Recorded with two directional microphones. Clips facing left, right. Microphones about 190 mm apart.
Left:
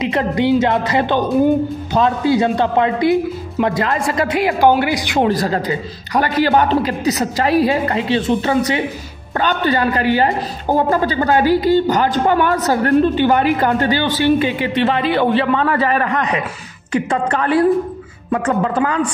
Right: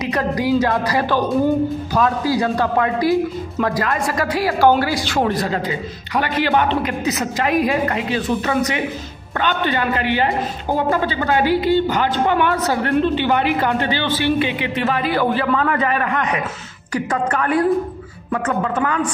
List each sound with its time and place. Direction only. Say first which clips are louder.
0.0 s a woman's voice: left 3 dB; 25° left (ahead or behind)
5.3 s speech: left 3 dB; 40° left (ahead or behind)
14.8 s a woman's voice: left 3 dB; 25° left (ahead or behind)